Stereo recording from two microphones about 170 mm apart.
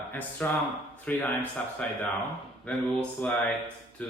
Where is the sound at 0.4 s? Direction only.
10° left (ahead or behind).